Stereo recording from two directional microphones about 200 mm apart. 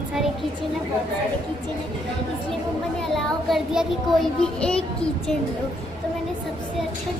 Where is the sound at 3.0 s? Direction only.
Centre (ahead or behind).